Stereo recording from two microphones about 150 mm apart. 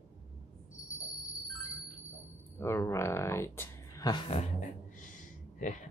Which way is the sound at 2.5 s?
15° left (ahead or behind).